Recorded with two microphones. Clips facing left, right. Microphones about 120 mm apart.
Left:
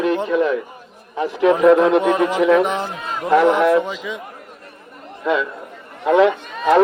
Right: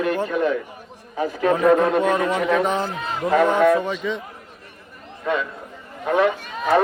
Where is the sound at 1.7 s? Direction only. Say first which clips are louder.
Left 4 dB; 90° left.